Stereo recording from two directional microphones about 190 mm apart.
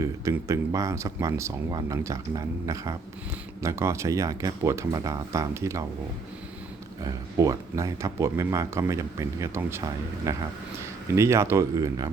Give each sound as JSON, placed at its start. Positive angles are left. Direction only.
{"t": 0.0, "sound": "speech", "side_deg": -15}
{"t": 7.0, "sound": "speech", "side_deg": -15}